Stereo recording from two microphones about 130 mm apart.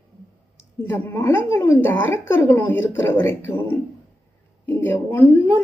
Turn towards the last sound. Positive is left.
turn(degrees=20)  # may be behind; listen again after turning